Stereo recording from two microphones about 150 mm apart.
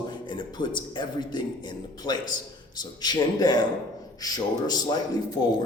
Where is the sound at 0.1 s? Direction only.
30° left (ahead or behind).